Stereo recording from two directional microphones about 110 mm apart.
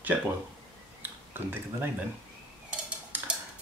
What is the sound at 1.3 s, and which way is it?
Speech, 20° right (ahead or behind).